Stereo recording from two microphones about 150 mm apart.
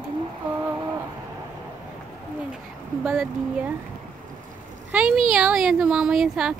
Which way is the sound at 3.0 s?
5° right (ahead or behind).